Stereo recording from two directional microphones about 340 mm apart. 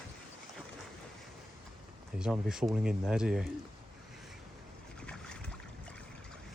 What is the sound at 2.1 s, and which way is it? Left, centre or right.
Speech, centre.